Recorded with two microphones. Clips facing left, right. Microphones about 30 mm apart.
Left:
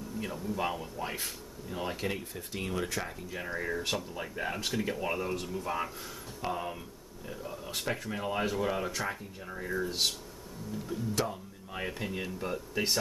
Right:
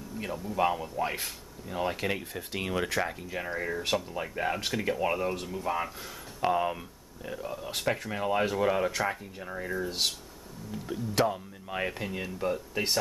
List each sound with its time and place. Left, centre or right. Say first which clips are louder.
0.2 s speech: right 5 dB; centre
6.4 s speech: right 8 dB; right
10.9 s speech: right 6 dB; right
12.0 s speech: right 3 dB; centre